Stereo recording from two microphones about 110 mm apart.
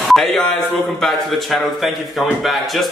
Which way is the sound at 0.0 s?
Centre (ahead or behind).